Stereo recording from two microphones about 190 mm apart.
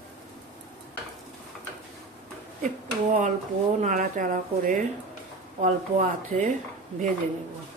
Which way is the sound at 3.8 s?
40° right (ahead or behind).